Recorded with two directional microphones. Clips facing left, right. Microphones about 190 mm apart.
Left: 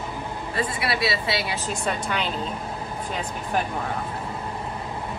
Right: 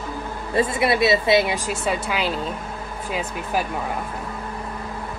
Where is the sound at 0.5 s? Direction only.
20° right (ahead or behind); by 3.7 s 5° right (ahead or behind).